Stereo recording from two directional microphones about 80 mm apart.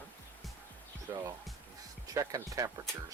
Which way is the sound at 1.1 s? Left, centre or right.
Right.